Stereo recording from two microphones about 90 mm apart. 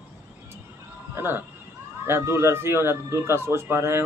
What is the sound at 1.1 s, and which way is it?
Speech, 25° right (ahead or behind).